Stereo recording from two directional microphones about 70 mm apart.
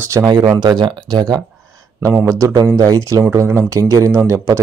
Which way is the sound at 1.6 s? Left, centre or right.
Right.